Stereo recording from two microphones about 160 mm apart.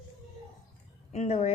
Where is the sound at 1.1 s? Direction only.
45° left (ahead or behind).